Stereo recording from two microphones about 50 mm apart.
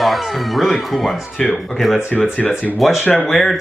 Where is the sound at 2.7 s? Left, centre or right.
Centre.